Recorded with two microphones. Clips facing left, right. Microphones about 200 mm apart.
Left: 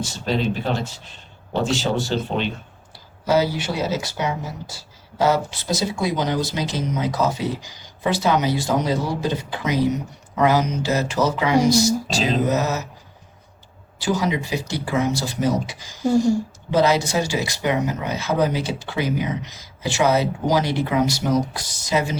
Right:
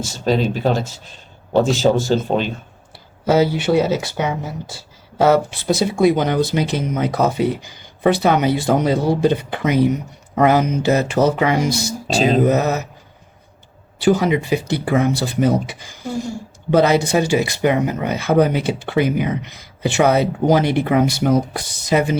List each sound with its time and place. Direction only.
0.3 s speech: 40° right (ahead or behind)
3.2 s speech: 60° right (ahead or behind)
14.0 s speech: 55° right (ahead or behind)